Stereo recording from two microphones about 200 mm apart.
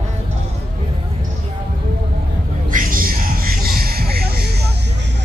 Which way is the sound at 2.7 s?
45° right (ahead or behind).